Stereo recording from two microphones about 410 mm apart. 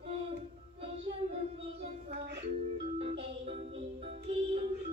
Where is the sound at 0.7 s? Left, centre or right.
Centre.